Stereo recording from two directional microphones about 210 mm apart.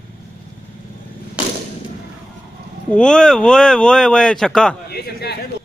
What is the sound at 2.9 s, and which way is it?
Speech, 5° left (ahead or behind).